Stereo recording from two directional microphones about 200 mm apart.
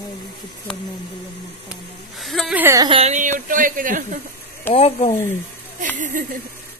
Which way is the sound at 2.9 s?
35° right (ahead or behind).